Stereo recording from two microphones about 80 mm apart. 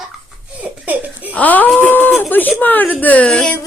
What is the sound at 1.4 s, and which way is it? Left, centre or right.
Speech, left.